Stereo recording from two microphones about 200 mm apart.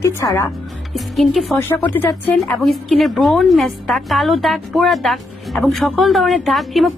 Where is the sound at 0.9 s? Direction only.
Centre (ahead or behind).